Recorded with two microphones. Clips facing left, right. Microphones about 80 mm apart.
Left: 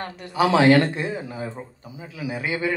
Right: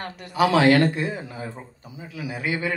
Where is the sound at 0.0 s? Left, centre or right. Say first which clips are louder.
Even; left.